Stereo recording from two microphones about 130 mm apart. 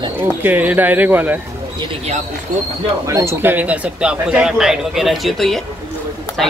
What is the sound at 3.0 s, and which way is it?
Speech, 20° right (ahead or behind).